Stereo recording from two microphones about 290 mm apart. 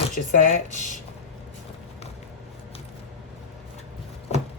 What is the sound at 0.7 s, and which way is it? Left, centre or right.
Speech, left.